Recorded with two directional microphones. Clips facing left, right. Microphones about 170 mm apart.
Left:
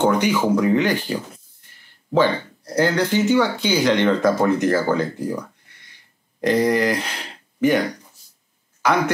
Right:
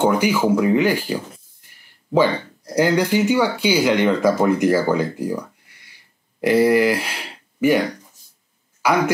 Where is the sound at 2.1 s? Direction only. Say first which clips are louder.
Right 1 dB; 10° right (ahead or behind).